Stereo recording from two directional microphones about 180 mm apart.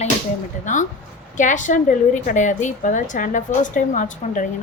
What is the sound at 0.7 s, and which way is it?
A woman's voice, 45° left (ahead or behind).